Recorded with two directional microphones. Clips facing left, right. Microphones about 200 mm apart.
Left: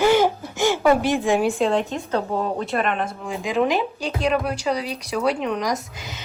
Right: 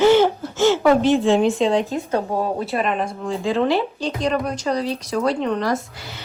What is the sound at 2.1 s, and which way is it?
Speech, 10° right (ahead or behind).